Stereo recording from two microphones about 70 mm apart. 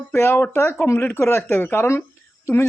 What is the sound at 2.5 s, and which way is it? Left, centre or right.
Speech, left.